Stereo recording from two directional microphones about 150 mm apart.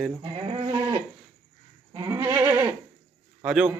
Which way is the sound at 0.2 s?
30° right (ahead or behind).